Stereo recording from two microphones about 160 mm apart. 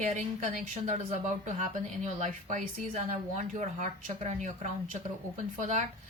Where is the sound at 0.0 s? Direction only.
50° right (ahead or behind).